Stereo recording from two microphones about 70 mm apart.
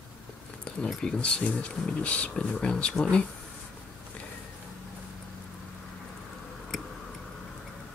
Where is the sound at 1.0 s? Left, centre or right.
Centre.